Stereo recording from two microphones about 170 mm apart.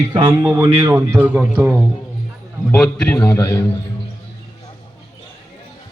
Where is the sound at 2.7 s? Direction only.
5° left (ahead or behind).